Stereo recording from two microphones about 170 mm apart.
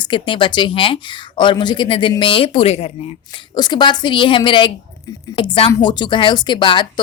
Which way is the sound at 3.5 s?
25° left (ahead or behind).